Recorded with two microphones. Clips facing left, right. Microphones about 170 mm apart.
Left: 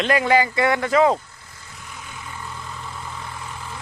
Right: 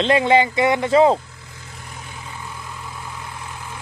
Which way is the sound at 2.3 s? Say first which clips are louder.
Left 1 dB; 5° right (ahead or behind).